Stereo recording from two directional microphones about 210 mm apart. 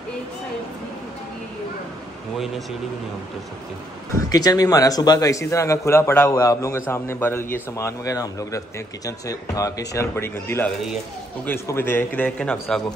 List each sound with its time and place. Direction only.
4.3 s speech: 15° left (ahead or behind)